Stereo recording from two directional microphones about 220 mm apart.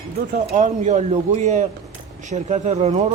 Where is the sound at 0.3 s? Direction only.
35° right (ahead or behind).